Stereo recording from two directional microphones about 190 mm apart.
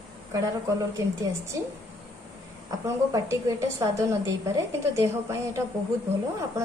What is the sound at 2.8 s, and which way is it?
A woman's voice, 15° right (ahead or behind).